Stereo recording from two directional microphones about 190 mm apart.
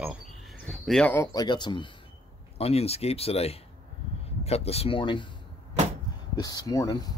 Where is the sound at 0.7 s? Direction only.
5° left (ahead or behind); by 5.3 s 25° left (ahead or behind).